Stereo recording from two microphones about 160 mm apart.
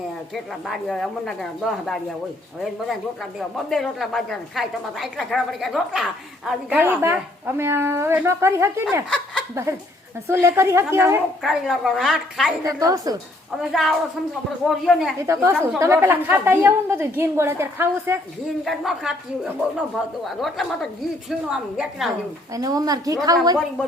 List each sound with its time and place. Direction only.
0.3 s a woman's voice: centre (ahead or behind)
3.5 s a woman's voice: centre (ahead or behind)
10.2 s a woman's voice: 15° right (ahead or behind)
11.4 s a woman's voice: centre (ahead or behind)
12.6 s a woman's voice: 20° right (ahead or behind)
13.6 s a woman's voice: centre (ahead or behind)
15.3 s a woman's voice: 15° right (ahead or behind)
18.6 s a woman's voice: centre (ahead or behind)
20.2 s a woman's voice: centre (ahead or behind)
22.5 s a woman's voice: 20° right (ahead or behind)